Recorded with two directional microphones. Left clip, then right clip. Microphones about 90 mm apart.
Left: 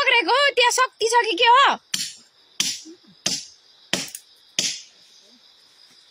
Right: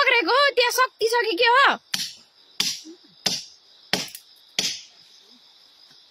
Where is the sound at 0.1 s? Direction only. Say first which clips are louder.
Left 1 dB; 25° right (ahead or behind); by 1.3 s 10° right (ahead or behind).